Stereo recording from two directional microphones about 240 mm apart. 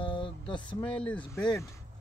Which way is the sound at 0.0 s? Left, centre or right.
Centre.